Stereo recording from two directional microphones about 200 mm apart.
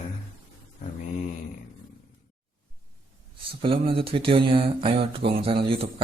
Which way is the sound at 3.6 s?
25° right (ahead or behind).